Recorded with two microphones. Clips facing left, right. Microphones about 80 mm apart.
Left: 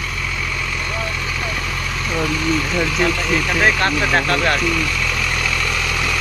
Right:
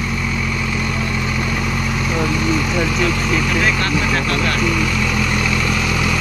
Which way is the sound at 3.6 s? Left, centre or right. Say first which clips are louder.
Left 1 dB; left.